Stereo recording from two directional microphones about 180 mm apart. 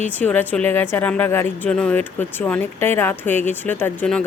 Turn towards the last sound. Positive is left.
turn(degrees=5)  # may be behind; listen again after turning